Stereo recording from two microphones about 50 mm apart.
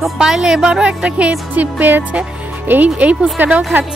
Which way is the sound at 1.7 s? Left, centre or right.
Right.